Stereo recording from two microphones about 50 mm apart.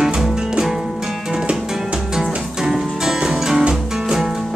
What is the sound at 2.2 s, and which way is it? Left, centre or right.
Music, centre.